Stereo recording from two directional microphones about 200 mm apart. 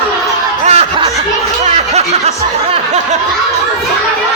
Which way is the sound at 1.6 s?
35° right (ahead or behind).